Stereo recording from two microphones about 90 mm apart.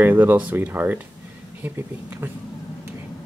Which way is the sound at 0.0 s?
20° right (ahead or behind).